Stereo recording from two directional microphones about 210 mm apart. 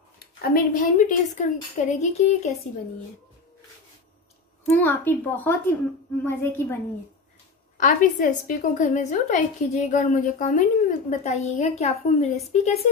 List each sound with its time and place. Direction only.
0.2 s a woman's voice: 40° left (ahead or behind)
4.6 s a woman's voice: 10° left (ahead or behind)
7.7 s a woman's voice: 40° left (ahead or behind)